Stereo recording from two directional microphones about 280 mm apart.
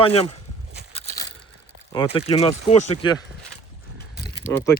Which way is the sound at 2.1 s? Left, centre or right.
Left.